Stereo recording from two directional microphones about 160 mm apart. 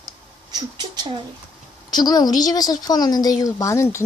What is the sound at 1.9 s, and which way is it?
A woman's voice, 25° left (ahead or behind).